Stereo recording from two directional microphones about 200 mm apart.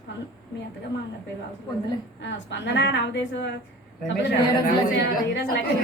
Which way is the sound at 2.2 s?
65° left (ahead or behind).